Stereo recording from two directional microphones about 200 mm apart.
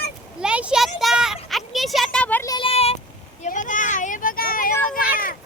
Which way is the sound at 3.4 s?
40° left (ahead or behind).